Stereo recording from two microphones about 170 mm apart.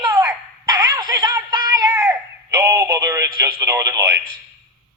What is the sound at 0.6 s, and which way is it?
Synthetic singing, 20° right (ahead or behind).